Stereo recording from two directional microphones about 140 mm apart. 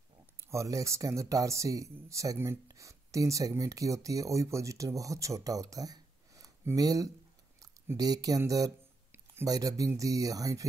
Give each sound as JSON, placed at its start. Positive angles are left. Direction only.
{"t": 0.4, "sound": "speech", "side_deg": -20}